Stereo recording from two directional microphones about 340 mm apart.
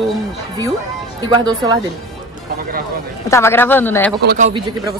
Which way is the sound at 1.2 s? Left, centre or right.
Centre.